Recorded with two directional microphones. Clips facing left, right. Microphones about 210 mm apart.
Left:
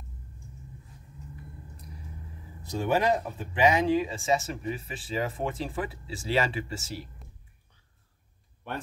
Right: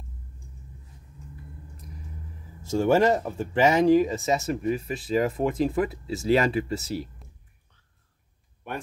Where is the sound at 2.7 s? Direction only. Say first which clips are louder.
Right 5 dB; 45° right (ahead or behind).